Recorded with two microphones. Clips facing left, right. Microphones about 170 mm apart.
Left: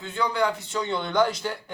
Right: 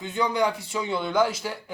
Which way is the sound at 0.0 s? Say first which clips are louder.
Right 1 dB; 15° right (ahead or behind).